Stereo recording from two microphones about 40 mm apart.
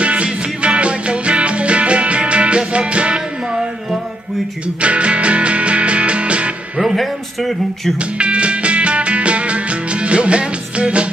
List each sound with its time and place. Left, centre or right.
0.0 s music: right
4.8 s music: right
6.8 s a sound: centre
8.0 s music: right